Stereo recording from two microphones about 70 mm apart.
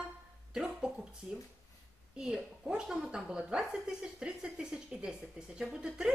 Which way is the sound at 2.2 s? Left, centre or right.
Centre.